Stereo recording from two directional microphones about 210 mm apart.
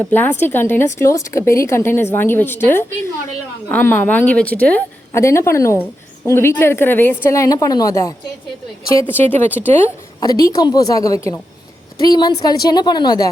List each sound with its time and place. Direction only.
0.0 s a woman's voice: 10° left (ahead or behind)